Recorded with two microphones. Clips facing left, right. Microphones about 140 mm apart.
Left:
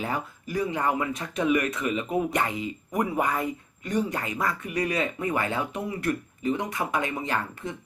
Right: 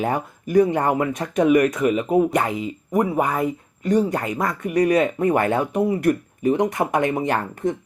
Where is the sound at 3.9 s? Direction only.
40° right (ahead or behind); by 5.6 s 55° right (ahead or behind).